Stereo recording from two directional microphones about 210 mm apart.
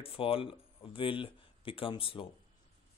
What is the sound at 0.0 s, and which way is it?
Speech, 25° left (ahead or behind).